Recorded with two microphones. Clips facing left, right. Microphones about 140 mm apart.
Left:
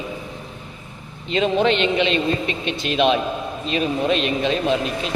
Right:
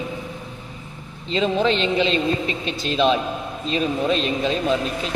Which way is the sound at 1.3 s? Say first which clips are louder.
Left 2 dB; 30° right (ahead or behind).